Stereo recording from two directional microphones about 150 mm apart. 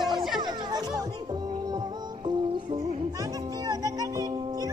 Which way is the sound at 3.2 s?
25° right (ahead or behind).